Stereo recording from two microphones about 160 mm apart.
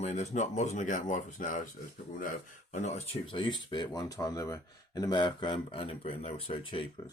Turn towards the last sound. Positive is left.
turn(degrees=35)  # may be behind; listen again after turning